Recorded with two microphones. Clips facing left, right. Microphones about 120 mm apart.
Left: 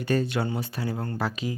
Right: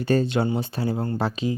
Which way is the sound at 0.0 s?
30° right (ahead or behind).